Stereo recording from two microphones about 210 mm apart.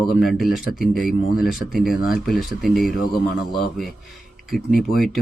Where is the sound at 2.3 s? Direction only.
Centre (ahead or behind).